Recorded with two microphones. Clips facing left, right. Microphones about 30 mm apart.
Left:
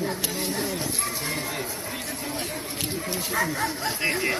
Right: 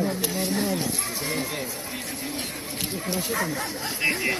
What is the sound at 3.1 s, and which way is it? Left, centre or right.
Speech, centre.